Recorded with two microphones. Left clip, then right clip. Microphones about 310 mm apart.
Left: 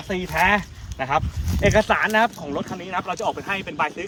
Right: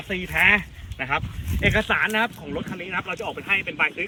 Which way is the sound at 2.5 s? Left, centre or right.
Centre.